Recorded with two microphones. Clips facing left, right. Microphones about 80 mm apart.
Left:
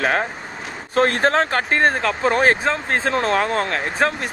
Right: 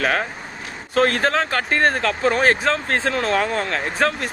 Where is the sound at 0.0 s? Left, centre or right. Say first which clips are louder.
Left 1 dB; left.